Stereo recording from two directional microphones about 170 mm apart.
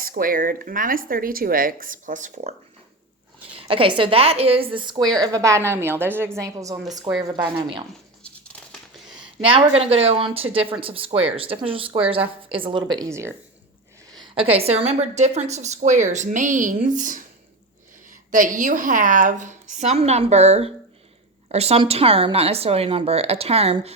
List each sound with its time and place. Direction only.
0.0 s speech: 55° right (ahead or behind)
3.5 s a woman's voice: 30° right (ahead or behind)
9.4 s a woman's voice: 35° right (ahead or behind); by 13.3 s 15° right (ahead or behind)
14.3 s a woman's voice: 35° right (ahead or behind)